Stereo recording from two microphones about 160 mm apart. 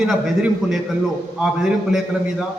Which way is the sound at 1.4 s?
5° right (ahead or behind).